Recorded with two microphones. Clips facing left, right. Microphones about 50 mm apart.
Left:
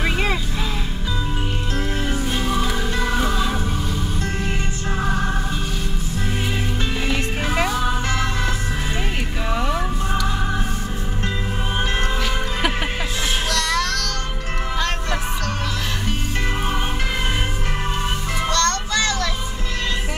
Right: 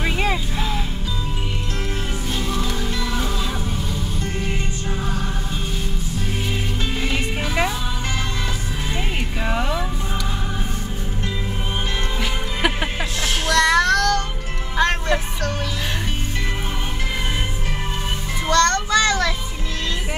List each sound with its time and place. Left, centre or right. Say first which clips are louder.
0.0 s music: even; centre
13.5 s child singing: right 9 dB; right
14.8 s music: right 7 dB; right
18.5 s child singing: right 5 dB; right